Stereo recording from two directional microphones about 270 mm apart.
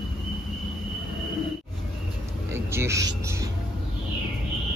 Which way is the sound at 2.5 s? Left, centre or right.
Centre.